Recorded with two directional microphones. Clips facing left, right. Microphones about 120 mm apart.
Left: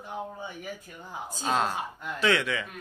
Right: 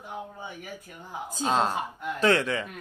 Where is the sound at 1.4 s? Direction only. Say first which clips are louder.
Right 2 dB; 25° right (ahead or behind).